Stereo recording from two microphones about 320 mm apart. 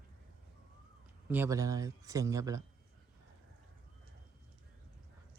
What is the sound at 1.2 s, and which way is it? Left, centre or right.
Speech, centre.